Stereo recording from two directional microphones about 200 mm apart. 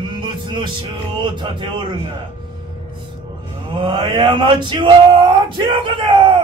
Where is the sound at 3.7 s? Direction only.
25° right (ahead or behind).